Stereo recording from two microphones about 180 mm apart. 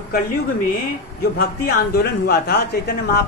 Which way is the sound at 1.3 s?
55° left (ahead or behind).